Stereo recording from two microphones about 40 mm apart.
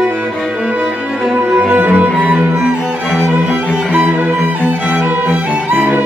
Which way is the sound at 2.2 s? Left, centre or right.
Right.